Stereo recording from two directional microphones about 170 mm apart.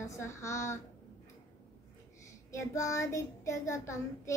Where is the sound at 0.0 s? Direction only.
15° left (ahead or behind).